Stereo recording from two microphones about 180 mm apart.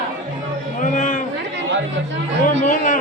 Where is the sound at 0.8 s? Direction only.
45° left (ahead or behind).